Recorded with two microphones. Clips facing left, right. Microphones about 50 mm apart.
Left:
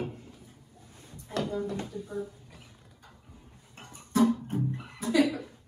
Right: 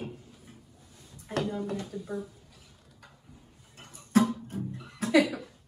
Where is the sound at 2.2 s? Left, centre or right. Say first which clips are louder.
Left 3 dB; left.